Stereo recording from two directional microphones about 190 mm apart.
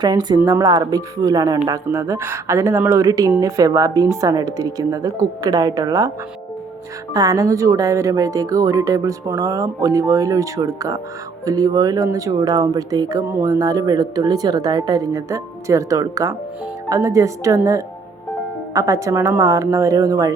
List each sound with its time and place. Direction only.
0.0 s speech: 20° right (ahead or behind)
7.1 s speech: 20° right (ahead or behind)